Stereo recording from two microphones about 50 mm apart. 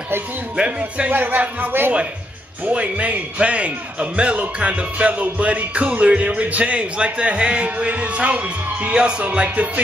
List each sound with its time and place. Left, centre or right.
0.6 s a man's voice: right
1.1 s speech: right
2.7 s a man's voice: right